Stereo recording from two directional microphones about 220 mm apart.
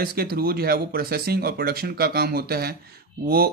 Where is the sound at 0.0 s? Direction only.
45° right (ahead or behind).